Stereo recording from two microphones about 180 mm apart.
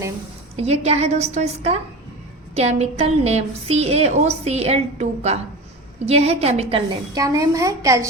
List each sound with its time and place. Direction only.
0.5 s a woman's voice: 35° right (ahead or behind)
7.1 s a woman's voice: 20° right (ahead or behind)